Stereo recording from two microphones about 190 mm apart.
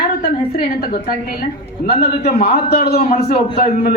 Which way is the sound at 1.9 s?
55° left (ahead or behind).